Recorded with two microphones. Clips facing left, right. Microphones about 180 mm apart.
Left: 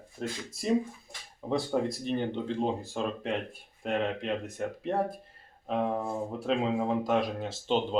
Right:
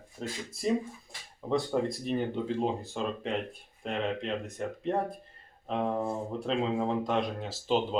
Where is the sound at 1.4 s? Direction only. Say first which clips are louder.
Even; centre (ahead or behind).